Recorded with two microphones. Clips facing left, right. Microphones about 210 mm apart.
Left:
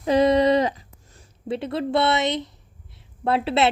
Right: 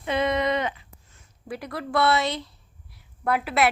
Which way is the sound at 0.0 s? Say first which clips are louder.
Left 7 dB; 35° left (ahead or behind).